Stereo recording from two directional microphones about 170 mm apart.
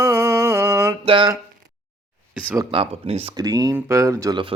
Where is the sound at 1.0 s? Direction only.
30° right (ahead or behind).